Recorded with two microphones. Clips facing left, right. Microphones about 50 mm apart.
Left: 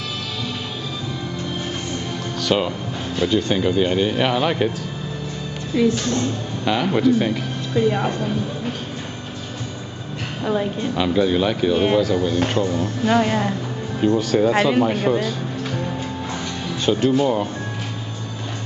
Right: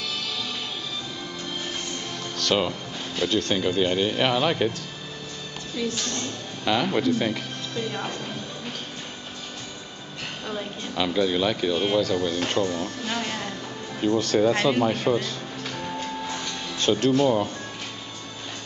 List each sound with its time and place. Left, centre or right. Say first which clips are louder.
2.4 s speech: left 3 dB; centre
5.8 s speech: left 10 dB; centre
7.7 s speech: left 11 dB; left
11.0 s speech: left 4 dB; centre
13.1 s speech: left 14 dB; left
14.0 s speech: left 3 dB; centre
16.0 s music: left 3 dB; centre